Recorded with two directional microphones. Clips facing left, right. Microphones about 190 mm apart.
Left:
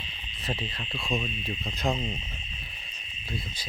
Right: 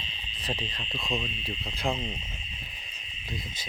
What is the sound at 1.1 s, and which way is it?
Speech, 10° left (ahead or behind).